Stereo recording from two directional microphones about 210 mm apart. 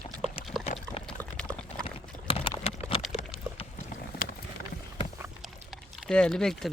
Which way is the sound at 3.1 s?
25° left (ahead or behind).